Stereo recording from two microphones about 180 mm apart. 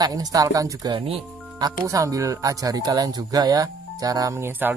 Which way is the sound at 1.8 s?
20° right (ahead or behind).